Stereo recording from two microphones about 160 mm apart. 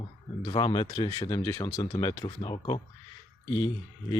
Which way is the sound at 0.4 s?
30° left (ahead or behind).